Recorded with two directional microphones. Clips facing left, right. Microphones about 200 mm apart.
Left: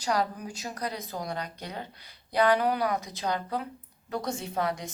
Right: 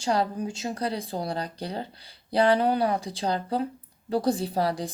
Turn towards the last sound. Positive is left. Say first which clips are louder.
# right 4 dB
turn(degrees=-35)  # may be behind; listen again after turning